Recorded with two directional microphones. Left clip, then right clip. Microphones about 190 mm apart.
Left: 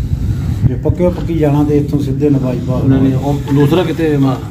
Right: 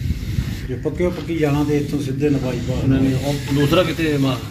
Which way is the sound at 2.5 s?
10° left (ahead or behind).